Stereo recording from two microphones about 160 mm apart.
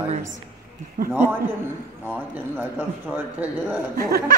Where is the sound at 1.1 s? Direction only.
10° right (ahead or behind).